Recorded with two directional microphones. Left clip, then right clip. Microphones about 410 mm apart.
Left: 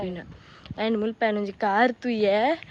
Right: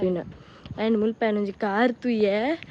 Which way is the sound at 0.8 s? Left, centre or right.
Centre.